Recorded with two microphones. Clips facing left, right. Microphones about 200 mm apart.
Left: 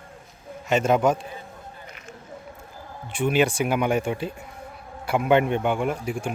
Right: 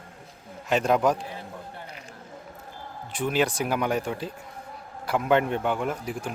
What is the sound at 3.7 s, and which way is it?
Speech, 5° left (ahead or behind).